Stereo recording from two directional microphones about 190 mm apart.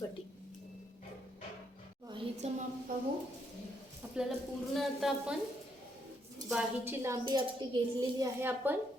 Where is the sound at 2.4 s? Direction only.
35° right (ahead or behind).